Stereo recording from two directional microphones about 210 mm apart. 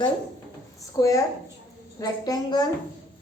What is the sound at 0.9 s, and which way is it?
A woman's voice, 15° left (ahead or behind).